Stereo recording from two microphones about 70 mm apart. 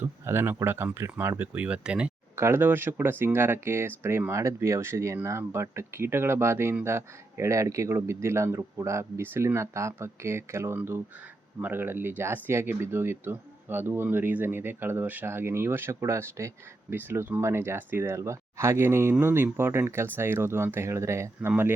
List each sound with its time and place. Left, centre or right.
0.0 s speech: right
1.5 s speech: centre
2.3 s speech: right
16.9 s speech: right
18.1 s speech: right